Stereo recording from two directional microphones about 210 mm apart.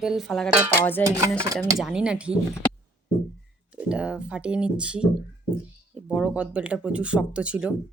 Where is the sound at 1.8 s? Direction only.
5° right (ahead or behind).